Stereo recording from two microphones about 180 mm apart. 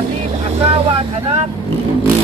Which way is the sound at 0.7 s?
35° right (ahead or behind).